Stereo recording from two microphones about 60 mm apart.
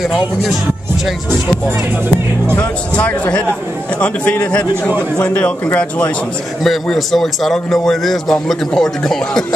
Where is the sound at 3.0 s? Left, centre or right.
Left.